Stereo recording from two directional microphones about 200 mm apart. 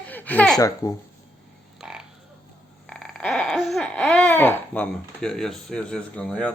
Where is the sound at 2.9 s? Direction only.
5° left (ahead or behind).